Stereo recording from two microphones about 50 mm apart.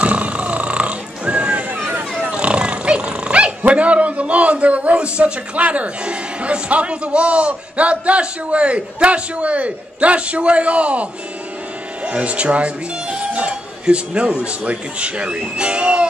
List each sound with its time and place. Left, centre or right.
0.0 s music: right
2.2 s speech: right